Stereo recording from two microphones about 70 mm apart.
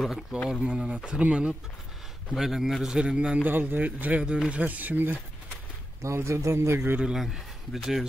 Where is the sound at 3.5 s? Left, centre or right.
Right.